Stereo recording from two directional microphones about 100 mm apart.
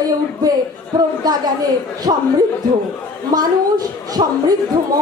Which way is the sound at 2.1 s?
75° right (ahead or behind).